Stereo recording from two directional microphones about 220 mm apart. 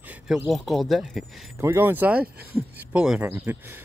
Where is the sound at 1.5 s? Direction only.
10° right (ahead or behind).